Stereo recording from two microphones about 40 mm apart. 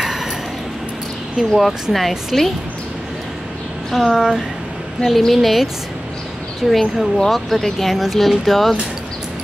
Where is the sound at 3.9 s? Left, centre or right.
Centre.